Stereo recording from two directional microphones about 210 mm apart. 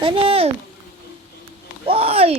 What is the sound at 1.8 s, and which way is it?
Speech, 25° right (ahead or behind).